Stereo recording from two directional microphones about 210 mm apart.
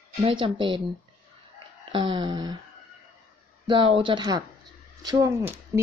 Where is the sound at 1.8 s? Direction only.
25° right (ahead or behind).